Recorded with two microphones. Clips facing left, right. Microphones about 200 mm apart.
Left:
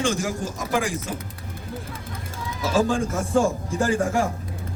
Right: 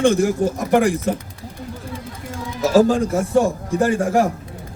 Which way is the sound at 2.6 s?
40° right (ahead or behind).